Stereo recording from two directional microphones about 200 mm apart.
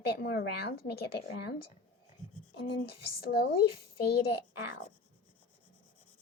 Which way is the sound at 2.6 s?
50° left (ahead or behind).